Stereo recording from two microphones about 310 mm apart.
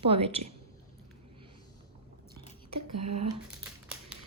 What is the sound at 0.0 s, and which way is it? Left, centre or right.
Speech, centre.